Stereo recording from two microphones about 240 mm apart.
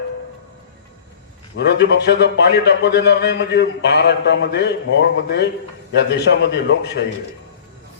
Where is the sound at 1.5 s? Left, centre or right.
Left.